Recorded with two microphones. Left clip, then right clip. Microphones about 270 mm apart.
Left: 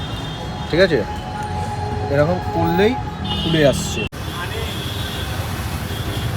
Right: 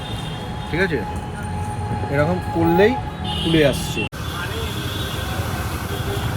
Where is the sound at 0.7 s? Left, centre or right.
Left.